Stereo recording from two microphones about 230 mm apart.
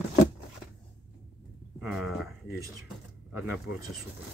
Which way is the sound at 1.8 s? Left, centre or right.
Centre.